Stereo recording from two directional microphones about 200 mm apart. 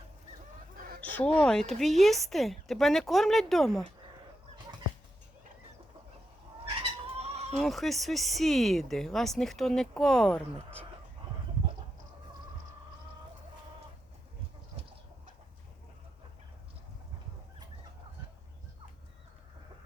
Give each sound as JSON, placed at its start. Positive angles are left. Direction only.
{"t": 1.1, "sound": "speech", "side_deg": 5}
{"t": 7.2, "sound": "bleat", "side_deg": -30}
{"t": 7.5, "sound": "speech", "side_deg": 0}